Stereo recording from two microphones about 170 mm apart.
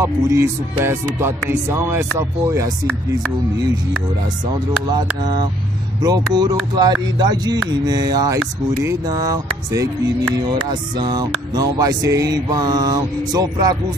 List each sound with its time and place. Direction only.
0.0 s speech: 15° right (ahead or behind)
4.8 s music: 25° right (ahead or behind)